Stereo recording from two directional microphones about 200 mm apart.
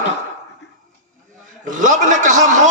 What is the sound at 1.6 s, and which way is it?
A man's voice, 40° right (ahead or behind).